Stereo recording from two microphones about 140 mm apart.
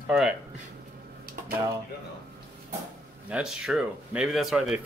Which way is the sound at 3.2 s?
5° right (ahead or behind).